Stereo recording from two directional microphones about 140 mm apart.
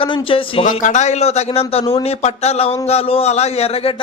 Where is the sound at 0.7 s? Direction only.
60° left (ahead or behind).